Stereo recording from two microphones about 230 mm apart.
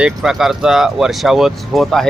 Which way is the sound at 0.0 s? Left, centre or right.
Centre.